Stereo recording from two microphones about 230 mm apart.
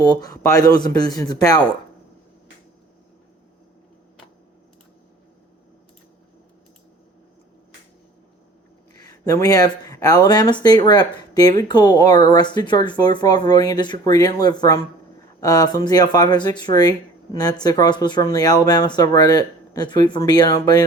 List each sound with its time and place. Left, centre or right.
0.0 s speech: centre
9.0 s speech: centre